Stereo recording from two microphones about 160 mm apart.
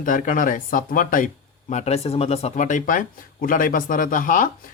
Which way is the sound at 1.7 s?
45° left (ahead or behind).